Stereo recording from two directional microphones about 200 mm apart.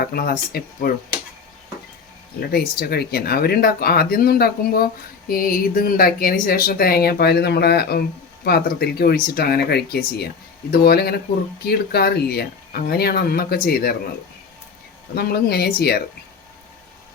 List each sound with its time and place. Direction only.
0.0 s speech: 50° left (ahead or behind)
2.5 s speech: 50° left (ahead or behind)
15.1 s speech: 50° left (ahead or behind)